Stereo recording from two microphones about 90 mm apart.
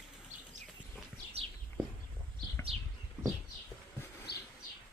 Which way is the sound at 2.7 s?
90° right.